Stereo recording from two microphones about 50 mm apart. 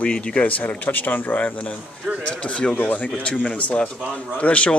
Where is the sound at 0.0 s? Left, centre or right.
Left.